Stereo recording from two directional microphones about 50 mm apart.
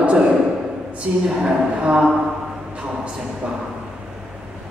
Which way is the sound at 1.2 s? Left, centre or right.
Centre.